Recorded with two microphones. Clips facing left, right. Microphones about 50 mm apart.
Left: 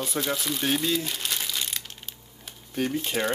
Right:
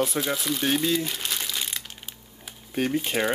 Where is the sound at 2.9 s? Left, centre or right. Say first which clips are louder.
Right 2 dB; centre.